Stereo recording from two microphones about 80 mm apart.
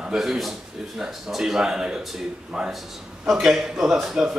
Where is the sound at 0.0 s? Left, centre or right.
Centre.